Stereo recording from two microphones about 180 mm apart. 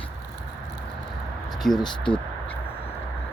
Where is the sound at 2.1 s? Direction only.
25° left (ahead or behind).